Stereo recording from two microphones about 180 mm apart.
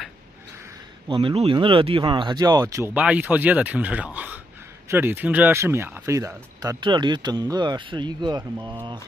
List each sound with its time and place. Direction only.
1.0 s speech: 30° right (ahead or behind)